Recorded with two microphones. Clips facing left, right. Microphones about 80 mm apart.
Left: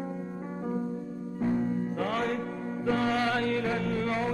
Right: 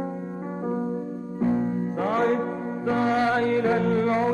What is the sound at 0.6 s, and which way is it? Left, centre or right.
Music, right.